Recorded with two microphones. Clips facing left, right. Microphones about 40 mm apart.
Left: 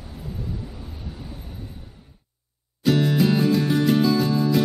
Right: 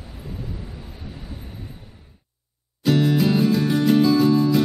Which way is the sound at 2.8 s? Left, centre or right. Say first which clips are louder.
Right 1 dB; centre.